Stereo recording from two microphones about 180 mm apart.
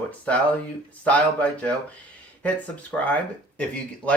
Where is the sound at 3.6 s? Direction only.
5° left (ahead or behind).